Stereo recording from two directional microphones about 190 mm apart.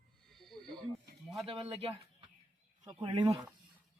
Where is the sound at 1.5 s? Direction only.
30° right (ahead or behind).